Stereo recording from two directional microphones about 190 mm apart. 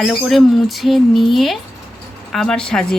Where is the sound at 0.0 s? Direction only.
Centre (ahead or behind).